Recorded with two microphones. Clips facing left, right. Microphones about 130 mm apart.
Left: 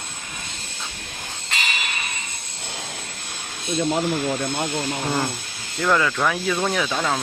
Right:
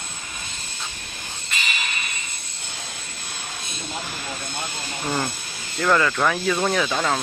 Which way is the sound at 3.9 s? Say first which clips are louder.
Left 7 dB; 80° left.